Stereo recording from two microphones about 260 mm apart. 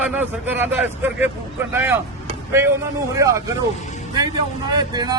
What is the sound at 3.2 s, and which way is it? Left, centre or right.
Speech, centre.